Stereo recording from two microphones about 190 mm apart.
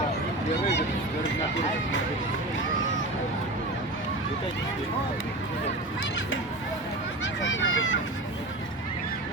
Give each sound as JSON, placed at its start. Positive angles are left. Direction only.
{"t": 7.4, "sound": "speech", "side_deg": 80}